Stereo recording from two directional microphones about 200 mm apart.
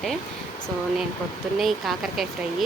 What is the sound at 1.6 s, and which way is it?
Speech, centre (ahead or behind).